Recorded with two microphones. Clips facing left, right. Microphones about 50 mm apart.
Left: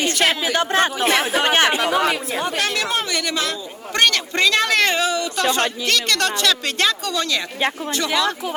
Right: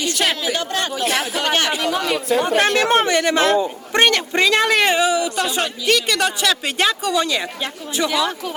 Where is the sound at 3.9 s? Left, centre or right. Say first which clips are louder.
Right 2 dB; right.